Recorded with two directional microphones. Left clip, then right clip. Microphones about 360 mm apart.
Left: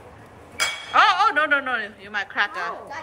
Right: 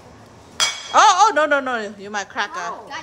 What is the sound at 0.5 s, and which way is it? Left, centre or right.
Speech, centre.